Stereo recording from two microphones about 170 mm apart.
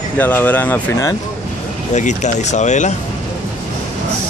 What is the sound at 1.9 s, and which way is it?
A man's voice, 45° left (ahead or behind).